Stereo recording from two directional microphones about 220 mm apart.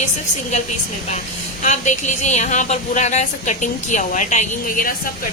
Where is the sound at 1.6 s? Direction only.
35° left (ahead or behind).